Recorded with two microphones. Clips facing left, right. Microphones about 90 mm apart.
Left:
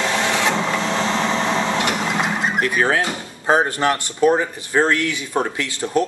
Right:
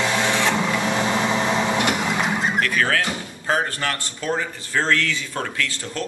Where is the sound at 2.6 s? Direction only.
20° left (ahead or behind).